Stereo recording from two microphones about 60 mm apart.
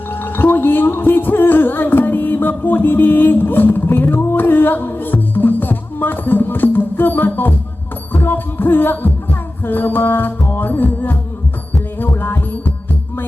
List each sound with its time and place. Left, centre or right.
0.1 s music: left